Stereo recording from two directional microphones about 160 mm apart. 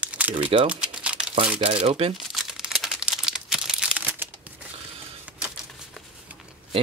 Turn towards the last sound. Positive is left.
turn(degrees=-10)  # may be behind; listen again after turning